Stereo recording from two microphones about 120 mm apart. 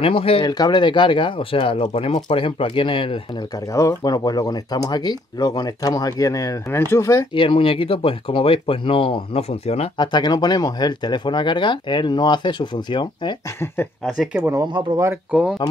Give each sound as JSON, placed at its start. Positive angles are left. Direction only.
{"t": 0.0, "sound": "speech", "side_deg": 50}
{"t": 0.5, "sound": "speech", "side_deg": 35}
{"t": 3.7, "sound": "speech", "side_deg": 30}
{"t": 7.3, "sound": "speech", "side_deg": 50}
{"t": 9.9, "sound": "speech", "side_deg": 35}
{"t": 14.0, "sound": "speech", "side_deg": -5}
{"t": 14.4, "sound": "speech", "side_deg": -25}
{"t": 15.6, "sound": "speech", "side_deg": 40}